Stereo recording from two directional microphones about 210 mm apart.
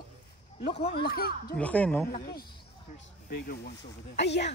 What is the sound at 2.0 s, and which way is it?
A woman's voice, 45° left (ahead or behind).